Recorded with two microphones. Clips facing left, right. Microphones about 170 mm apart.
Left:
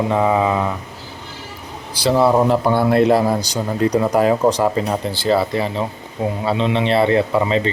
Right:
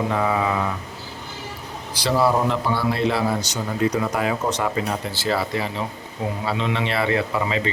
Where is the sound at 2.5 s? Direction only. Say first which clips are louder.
Left 7 dB; 50° left (ahead or behind).